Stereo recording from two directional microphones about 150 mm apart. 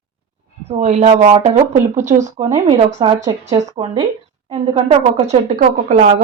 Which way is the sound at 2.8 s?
40° right (ahead or behind).